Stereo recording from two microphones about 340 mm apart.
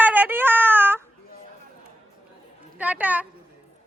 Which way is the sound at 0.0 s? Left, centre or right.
Centre.